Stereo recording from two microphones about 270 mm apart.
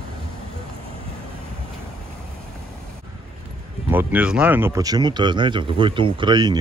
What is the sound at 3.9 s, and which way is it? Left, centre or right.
Speech, centre.